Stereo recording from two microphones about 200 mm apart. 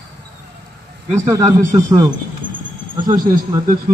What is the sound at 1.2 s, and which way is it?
Speech, 15° right (ahead or behind).